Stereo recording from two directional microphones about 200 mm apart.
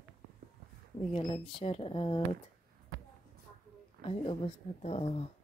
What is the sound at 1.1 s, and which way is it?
Speech, 25° left (ahead or behind).